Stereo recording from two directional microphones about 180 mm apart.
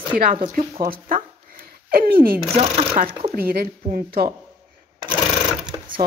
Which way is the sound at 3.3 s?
55° right (ahead or behind).